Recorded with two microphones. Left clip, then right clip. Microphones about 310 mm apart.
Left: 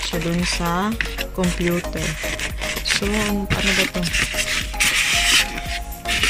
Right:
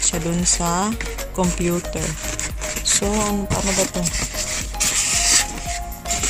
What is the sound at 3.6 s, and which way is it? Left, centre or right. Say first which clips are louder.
Speech: left 4 dB; centre.